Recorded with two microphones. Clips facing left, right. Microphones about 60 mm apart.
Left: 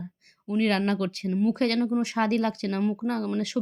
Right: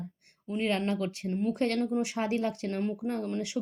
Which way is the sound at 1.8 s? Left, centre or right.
Left.